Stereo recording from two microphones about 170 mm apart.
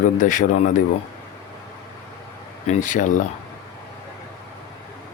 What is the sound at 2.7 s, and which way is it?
Speech, 50° left (ahead or behind).